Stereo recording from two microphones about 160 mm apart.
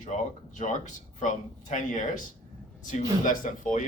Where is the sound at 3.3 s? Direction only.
55° left (ahead or behind).